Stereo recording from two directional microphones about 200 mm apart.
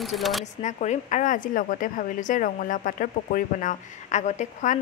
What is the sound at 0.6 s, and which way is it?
A woman's voice, 35° left (ahead or behind).